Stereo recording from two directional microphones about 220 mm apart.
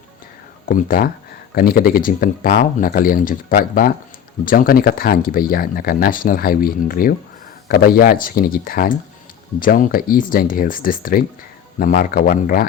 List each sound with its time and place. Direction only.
0.6 s speech: 40° left (ahead or behind)